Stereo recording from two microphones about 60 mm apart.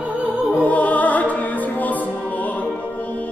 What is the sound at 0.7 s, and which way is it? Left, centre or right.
Music, left.